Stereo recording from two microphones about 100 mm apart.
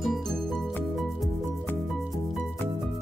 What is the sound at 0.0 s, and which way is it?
Music, centre (ahead or behind).